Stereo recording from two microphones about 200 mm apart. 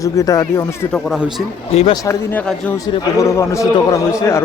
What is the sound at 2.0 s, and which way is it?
Speech, 15° left (ahead or behind).